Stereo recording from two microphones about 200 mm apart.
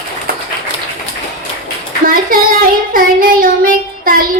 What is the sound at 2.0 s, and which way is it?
Child singing, 45° right (ahead or behind).